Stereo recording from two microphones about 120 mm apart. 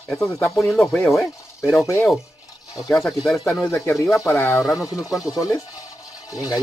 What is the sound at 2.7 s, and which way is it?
Speech, centre (ahead or behind).